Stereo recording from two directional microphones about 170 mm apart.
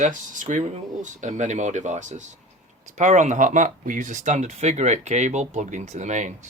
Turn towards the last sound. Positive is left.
turn(degrees=-45)  # may be behind; listen again after turning